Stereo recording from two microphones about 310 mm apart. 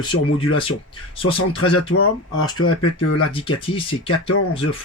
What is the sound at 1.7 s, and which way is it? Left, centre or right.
Speech, left.